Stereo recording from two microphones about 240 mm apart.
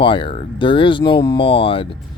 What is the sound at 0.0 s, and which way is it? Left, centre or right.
Speech, left.